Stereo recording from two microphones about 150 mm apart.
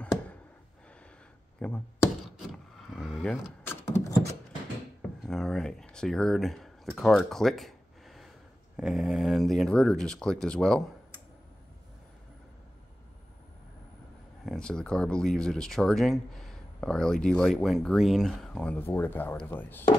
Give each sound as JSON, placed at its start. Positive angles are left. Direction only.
{"t": 1.6, "sound": "speech", "side_deg": 10}
{"t": 2.3, "sound": "power windows", "side_deg": -5}
{"t": 3.6, "sound": "a sound", "side_deg": 20}
{"t": 5.2, "sound": "speech", "side_deg": 5}
{"t": 7.0, "sound": "a sound", "side_deg": 0}
{"t": 8.7, "sound": "speech", "side_deg": -5}
{"t": 14.4, "sound": "speech", "side_deg": 5}